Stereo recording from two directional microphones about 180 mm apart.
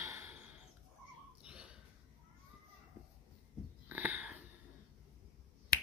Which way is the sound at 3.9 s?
10° right (ahead or behind).